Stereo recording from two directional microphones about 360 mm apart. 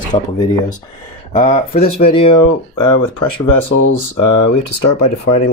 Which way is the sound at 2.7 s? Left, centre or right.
Left.